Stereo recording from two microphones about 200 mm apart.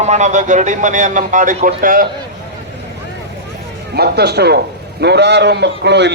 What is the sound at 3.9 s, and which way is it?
A man's voice, 55° right (ahead or behind).